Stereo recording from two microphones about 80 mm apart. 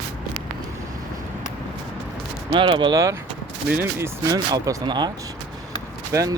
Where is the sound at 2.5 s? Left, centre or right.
Right.